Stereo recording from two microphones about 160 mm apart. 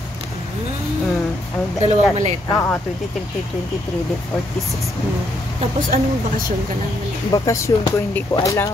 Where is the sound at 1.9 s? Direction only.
45° right (ahead or behind).